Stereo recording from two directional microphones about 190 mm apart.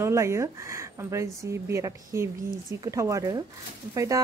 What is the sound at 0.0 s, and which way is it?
A woman's voice, 15° right (ahead or behind).